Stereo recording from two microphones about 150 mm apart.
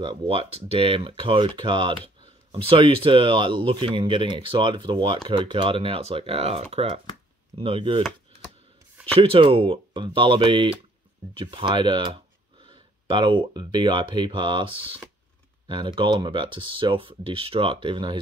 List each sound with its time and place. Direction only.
0.3 s speech: 40° right (ahead or behind)
9.2 s speech: 35° right (ahead or behind)